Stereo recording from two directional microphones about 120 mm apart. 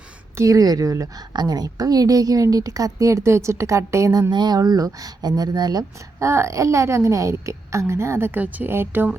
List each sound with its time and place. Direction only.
0.3 s a woman's voice: 30° right (ahead or behind)